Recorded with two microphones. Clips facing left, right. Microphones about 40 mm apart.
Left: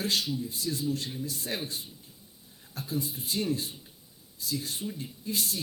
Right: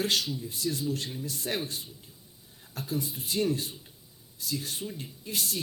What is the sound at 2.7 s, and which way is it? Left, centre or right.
Speech, right.